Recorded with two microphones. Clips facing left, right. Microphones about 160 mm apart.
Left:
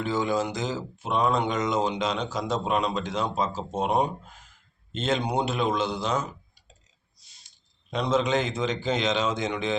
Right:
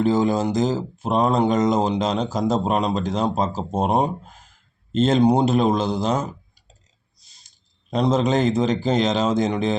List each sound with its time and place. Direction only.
0.0 s speech: 40° right (ahead or behind)
7.9 s a man's voice: 40° right (ahead or behind)